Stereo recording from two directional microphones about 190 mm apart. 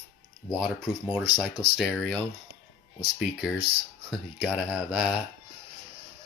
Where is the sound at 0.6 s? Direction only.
5° right (ahead or behind).